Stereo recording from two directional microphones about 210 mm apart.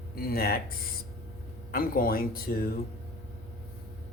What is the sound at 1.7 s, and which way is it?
Speech, 45° left (ahead or behind).